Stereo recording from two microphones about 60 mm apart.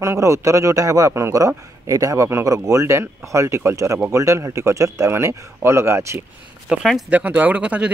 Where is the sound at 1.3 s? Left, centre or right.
Right.